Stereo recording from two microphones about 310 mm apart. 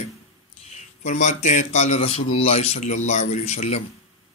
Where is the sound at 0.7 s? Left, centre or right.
Left.